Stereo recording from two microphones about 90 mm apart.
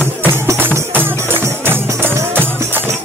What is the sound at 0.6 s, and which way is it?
Music, 25° right (ahead or behind).